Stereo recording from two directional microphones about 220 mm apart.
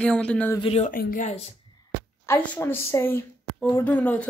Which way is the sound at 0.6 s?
30° left (ahead or behind).